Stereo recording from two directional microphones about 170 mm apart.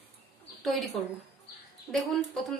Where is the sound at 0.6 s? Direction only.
Centre (ahead or behind).